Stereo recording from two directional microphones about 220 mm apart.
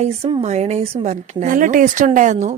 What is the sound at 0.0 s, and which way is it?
A woman's voice, 30° right (ahead or behind).